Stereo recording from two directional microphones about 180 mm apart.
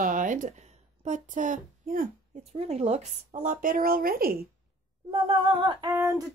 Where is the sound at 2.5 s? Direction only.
35° right (ahead or behind); by 4.5 s 55° right (ahead or behind).